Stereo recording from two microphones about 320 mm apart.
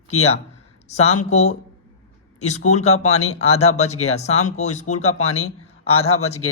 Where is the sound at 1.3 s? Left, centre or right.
Left.